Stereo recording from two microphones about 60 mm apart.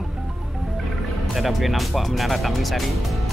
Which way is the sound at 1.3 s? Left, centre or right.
Centre.